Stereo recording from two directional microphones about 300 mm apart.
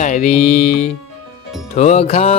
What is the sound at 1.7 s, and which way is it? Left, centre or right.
Mantra, left.